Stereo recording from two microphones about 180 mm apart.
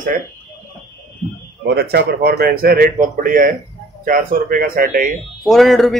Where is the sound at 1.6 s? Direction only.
65° right (ahead or behind).